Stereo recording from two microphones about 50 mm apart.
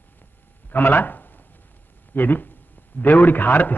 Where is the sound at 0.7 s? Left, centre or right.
Left.